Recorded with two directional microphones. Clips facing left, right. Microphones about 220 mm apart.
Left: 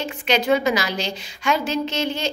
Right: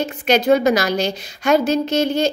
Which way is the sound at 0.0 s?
45° right (ahead or behind).